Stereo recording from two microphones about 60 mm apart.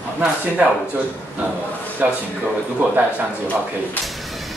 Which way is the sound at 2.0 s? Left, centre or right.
Right.